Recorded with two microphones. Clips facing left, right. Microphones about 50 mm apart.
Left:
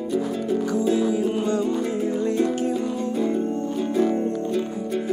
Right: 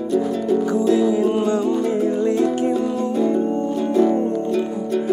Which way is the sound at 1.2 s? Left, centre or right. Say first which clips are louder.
Right 4 dB; right.